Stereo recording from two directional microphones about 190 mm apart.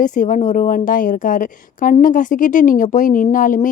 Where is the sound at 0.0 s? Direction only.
45° left (ahead or behind).